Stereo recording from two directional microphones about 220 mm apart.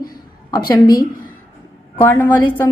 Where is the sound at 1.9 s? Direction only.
10° left (ahead or behind).